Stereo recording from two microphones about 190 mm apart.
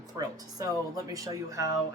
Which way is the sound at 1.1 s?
20° right (ahead or behind).